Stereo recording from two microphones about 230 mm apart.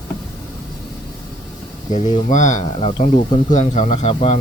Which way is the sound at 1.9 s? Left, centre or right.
Left.